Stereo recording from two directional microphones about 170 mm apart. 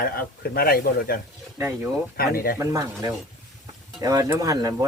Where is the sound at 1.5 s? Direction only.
15° right (ahead or behind).